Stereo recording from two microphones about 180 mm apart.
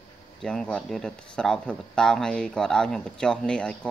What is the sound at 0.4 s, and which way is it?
Speech, 5° left (ahead or behind).